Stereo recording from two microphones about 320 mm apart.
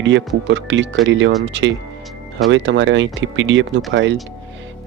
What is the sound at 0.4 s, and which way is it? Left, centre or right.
Speech, right.